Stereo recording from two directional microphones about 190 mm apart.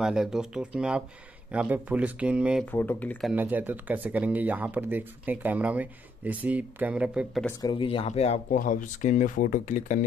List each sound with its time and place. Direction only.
0.0 s speech: 5° right (ahead or behind)
2.6 s speech: 10° left (ahead or behind)
3.3 s speech: 10° right (ahead or behind)
7.6 s speech: 25° left (ahead or behind)